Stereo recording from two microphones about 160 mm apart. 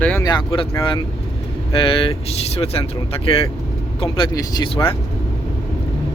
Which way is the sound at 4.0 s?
30° left (ahead or behind).